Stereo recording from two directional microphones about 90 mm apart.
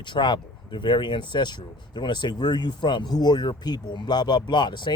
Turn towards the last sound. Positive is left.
turn(degrees=55)  # may be behind; listen again after turning